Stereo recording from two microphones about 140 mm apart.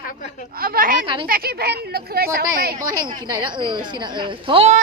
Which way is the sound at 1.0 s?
35° right (ahead or behind).